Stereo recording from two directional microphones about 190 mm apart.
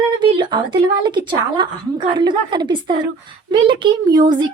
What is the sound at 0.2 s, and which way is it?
A woman's voice, 25° right (ahead or behind).